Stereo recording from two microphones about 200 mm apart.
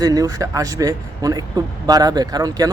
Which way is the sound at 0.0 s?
20° right (ahead or behind).